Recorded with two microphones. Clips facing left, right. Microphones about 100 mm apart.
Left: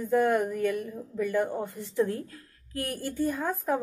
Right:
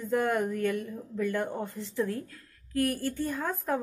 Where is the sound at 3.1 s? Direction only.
5° left (ahead or behind).